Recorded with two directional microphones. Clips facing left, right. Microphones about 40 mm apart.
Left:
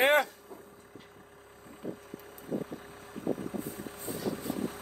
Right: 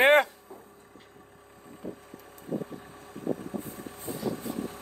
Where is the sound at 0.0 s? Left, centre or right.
Right.